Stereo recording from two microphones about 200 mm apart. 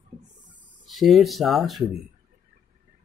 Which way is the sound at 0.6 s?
5° right (ahead or behind).